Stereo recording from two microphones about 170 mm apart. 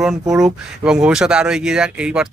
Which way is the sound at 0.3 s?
Centre (ahead or behind).